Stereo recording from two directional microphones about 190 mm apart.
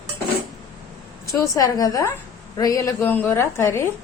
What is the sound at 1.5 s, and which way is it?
A woman's voice, 20° left (ahead or behind).